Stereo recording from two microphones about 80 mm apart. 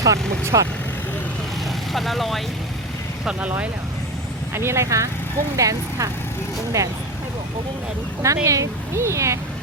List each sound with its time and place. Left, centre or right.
0.0 s speech: right
1.9 s speech: centre
4.5 s speech: right
8.2 s speech: right